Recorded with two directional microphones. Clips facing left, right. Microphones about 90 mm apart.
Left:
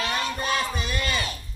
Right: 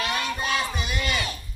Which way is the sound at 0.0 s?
25° left (ahead or behind).